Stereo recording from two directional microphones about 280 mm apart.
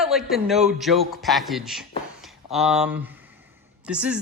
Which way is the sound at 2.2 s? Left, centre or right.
Centre.